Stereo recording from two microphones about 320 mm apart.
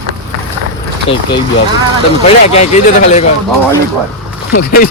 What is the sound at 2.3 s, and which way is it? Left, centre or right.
Speech, centre.